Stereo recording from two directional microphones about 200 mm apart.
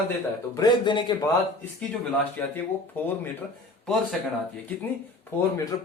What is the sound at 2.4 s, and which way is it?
A man's voice, 10° left (ahead or behind).